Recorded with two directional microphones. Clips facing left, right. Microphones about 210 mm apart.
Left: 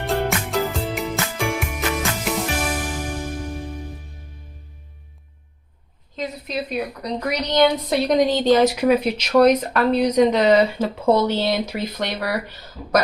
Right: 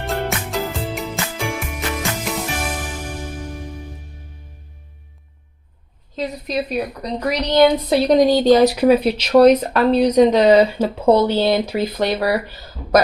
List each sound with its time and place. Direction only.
0.0 s music: centre (ahead or behind)
6.1 s a woman's voice: 35° right (ahead or behind)